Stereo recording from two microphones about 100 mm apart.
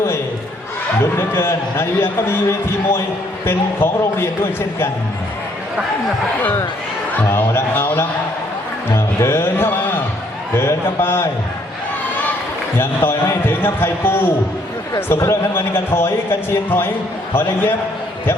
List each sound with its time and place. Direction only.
1.1 s a man's voice: 25° left (ahead or behind)
6.4 s a man's voice: 20° left (ahead or behind)
12.7 s a man's voice: 20° left (ahead or behind)